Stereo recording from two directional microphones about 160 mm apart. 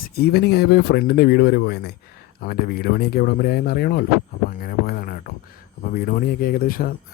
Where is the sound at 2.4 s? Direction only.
70° left (ahead or behind).